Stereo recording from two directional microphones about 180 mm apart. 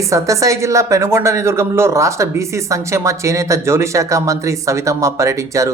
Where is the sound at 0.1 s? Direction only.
15° right (ahead or behind).